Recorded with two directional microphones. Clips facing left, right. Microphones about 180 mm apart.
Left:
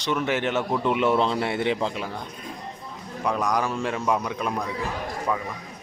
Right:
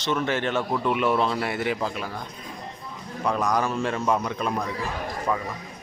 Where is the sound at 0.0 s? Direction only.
15° left (ahead or behind).